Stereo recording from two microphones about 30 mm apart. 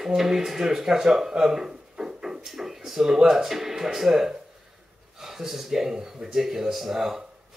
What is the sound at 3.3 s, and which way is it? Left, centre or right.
Speech, centre.